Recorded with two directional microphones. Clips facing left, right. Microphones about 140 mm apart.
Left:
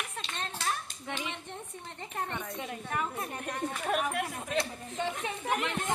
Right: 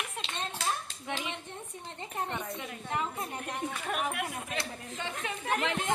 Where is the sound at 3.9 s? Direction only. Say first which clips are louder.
Left 3 dB; 45° left (ahead or behind).